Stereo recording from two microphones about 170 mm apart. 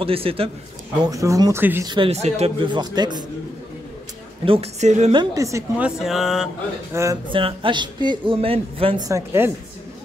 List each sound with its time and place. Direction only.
0.0 s speech: 35° right (ahead or behind)
1.0 s speech: 20° right (ahead or behind)
1.9 s speech: 35° right (ahead or behind)
4.5 s speech: 40° right (ahead or behind)
5.1 s speech: 25° right (ahead or behind)
5.9 s a sound: centre (ahead or behind)
6.9 s speech: 15° right (ahead or behind)
7.3 s speech: 30° right (ahead or behind)
9.0 s speech: 15° right (ahead or behind)